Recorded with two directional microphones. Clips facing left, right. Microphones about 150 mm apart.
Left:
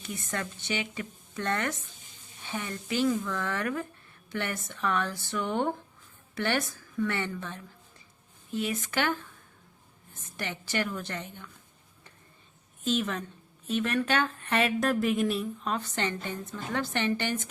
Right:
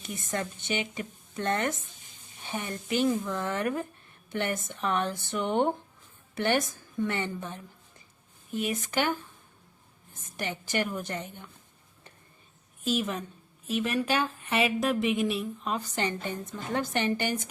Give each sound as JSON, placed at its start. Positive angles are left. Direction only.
{"t": 0.0, "sound": "speech", "side_deg": -20}
{"t": 2.4, "sound": "a sound", "side_deg": -20}
{"t": 2.9, "sound": "a woman's voice", "side_deg": -20}
{"t": 10.3, "sound": "a woman's voice", "side_deg": -15}
{"t": 12.8, "sound": "a woman's voice", "side_deg": -10}